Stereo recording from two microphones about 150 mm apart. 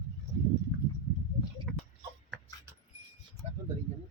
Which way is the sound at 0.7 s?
20° right (ahead or behind).